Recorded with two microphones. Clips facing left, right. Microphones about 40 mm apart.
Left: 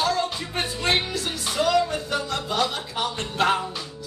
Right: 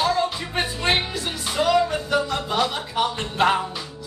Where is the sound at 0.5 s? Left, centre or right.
Centre.